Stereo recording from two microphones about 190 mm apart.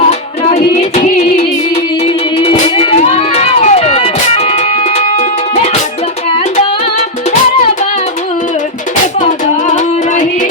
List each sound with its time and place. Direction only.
0.1 s music: 35° left (ahead or behind)
9.2 s music: 40° left (ahead or behind)